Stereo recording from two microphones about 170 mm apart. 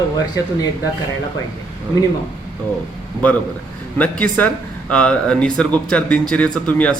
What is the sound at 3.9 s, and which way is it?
A man's voice, 10° left (ahead or behind).